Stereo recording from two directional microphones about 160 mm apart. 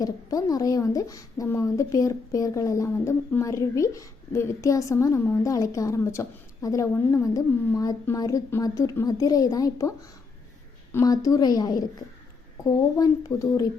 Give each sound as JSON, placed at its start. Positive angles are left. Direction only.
{"t": 0.0, "sound": "a woman's voice", "side_deg": 20}
{"t": 10.9, "sound": "a woman's voice", "side_deg": 20}